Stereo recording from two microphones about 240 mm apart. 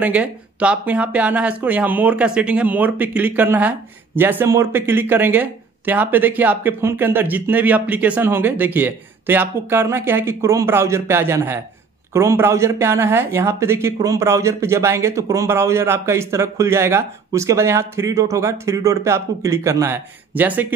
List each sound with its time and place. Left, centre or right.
0.0 s speech: centre